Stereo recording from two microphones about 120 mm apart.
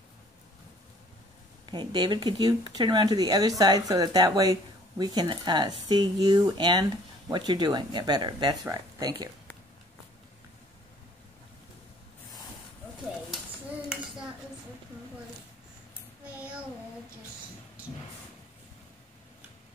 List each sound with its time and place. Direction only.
1.7 s speech: 40° right (ahead or behind)